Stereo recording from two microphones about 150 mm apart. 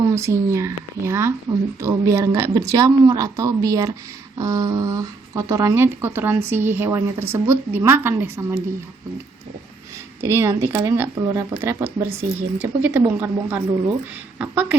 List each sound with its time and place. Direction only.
0.0 s speech: 20° right (ahead or behind)
10.2 s speech: 15° right (ahead or behind)